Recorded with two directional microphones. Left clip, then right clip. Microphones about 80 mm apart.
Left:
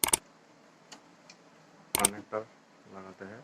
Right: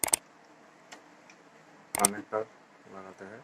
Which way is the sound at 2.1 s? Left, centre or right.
Right.